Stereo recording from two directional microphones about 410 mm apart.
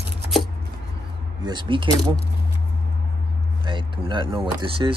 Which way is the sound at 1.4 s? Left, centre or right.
Centre.